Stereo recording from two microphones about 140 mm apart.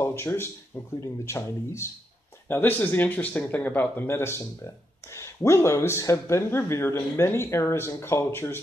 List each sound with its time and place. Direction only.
0.0 s speech: 15° left (ahead or behind)